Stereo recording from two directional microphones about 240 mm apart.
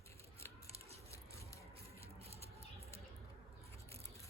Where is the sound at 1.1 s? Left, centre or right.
Centre.